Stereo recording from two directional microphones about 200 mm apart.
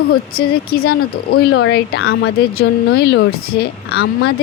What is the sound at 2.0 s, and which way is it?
Speech, 90° left.